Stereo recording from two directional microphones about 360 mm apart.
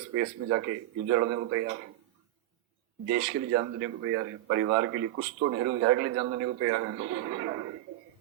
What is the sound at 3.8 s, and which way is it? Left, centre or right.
Speech, right.